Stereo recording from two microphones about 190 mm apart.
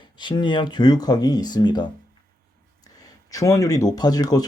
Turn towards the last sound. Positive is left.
turn(degrees=20)  # may be behind; listen again after turning